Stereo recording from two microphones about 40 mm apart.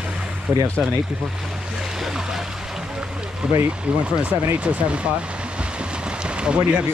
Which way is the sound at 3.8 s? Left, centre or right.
Right.